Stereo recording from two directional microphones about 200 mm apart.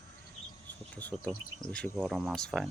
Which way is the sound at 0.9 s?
5° left (ahead or behind).